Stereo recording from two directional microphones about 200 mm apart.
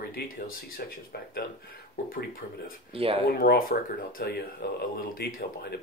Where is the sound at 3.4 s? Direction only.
45° left (ahead or behind).